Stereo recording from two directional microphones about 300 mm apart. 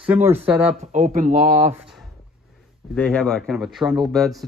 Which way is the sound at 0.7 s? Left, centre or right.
Right.